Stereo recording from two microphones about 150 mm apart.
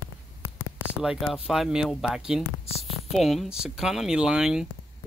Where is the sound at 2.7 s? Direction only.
45° left (ahead or behind).